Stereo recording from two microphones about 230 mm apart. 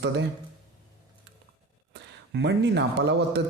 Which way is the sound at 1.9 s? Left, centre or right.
Right.